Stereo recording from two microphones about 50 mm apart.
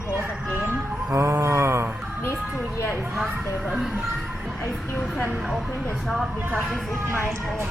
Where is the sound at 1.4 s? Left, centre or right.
Right.